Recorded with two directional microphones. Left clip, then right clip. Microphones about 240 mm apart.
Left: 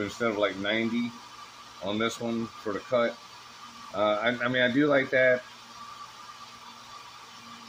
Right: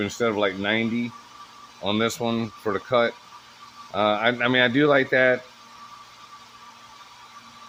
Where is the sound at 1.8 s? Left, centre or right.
Right.